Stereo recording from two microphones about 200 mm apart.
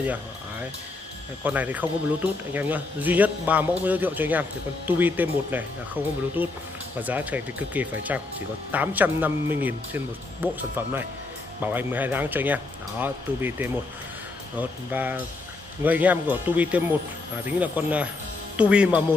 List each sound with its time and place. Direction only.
0.0 s music: 10° right (ahead or behind)
1.4 s a man's voice: 10° right (ahead or behind)